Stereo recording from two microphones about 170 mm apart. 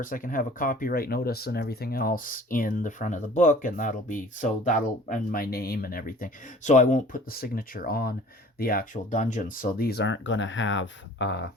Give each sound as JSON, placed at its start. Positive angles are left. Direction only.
{"t": 0.0, "sound": "speech", "side_deg": 55}